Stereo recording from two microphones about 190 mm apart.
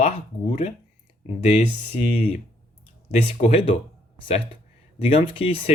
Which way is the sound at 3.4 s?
30° left (ahead or behind).